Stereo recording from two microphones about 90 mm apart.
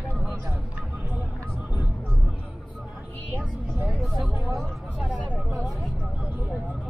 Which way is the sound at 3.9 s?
Centre (ahead or behind).